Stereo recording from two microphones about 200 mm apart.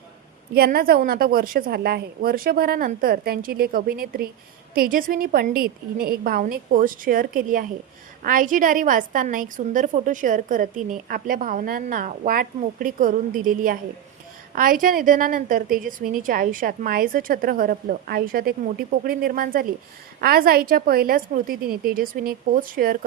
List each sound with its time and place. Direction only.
0.5 s a woman's voice: 50° right (ahead or behind)